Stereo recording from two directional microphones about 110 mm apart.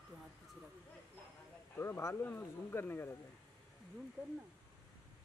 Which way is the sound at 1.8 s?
20° left (ahead or behind).